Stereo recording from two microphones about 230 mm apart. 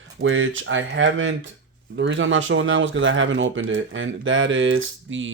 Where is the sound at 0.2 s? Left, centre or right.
Right.